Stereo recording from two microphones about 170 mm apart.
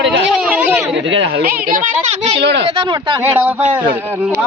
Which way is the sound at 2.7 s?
30° right (ahead or behind).